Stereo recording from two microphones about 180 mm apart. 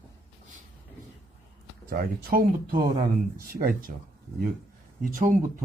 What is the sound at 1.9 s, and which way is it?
Speech, 55° right (ahead or behind).